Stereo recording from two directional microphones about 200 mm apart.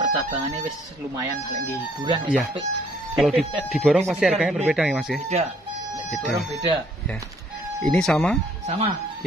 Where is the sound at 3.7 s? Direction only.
Centre (ahead or behind).